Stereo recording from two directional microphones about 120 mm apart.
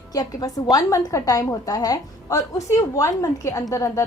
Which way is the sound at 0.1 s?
30° left (ahead or behind).